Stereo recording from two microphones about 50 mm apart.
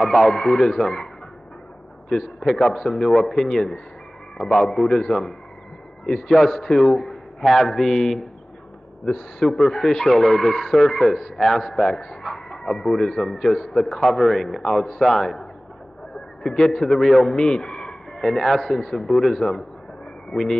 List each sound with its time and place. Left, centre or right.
0.0 s a man's voice: centre
2.0 s a man's voice: centre
16.4 s a man's voice: centre
17.8 s a man's voice: centre